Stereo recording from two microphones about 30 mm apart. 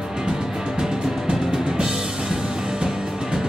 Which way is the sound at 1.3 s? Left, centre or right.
Right.